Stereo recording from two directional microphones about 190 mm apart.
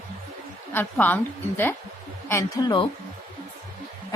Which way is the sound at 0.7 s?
10° left (ahead or behind).